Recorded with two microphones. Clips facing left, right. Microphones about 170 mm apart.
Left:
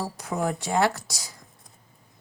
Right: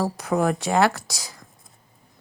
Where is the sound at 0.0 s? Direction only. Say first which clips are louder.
Right 6 dB; 85° right.